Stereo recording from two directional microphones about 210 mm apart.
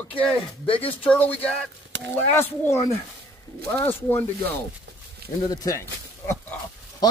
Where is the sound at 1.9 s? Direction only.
60° right (ahead or behind).